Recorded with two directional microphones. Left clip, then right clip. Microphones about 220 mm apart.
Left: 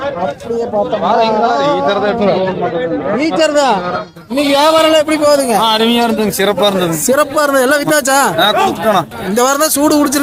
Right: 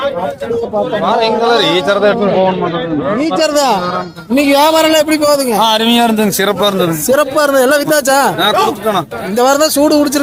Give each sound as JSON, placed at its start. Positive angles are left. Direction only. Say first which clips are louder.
{"t": 1.9, "sound": "a man's voice", "louder": "right 2 dB", "side_deg": -45}
{"t": 3.2, "sound": "a man's voice", "louder": "left 1 dB", "side_deg": -10}
{"t": 5.5, "sound": "a man's voice", "louder": "right 1 dB", "side_deg": -45}
{"t": 6.6, "sound": "a man's voice", "louder": "even", "side_deg": -10}